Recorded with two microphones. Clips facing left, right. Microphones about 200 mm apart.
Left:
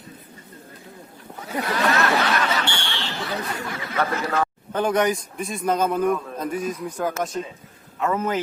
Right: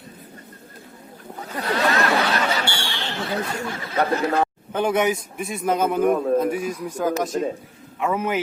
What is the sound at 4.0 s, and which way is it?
Speech, 35° right (ahead or behind).